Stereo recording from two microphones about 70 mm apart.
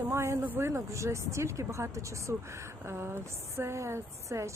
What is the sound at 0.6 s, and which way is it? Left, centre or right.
A woman's voice, right.